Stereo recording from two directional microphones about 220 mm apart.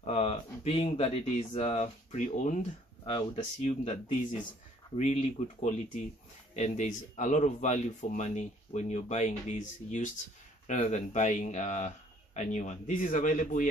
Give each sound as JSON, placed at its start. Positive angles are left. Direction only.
{"t": 0.0, "sound": "speech", "side_deg": 30}